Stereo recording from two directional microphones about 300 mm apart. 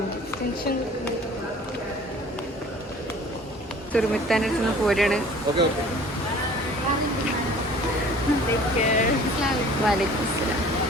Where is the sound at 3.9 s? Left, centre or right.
Centre.